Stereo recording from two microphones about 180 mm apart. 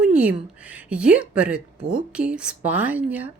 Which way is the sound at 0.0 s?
5° right (ahead or behind).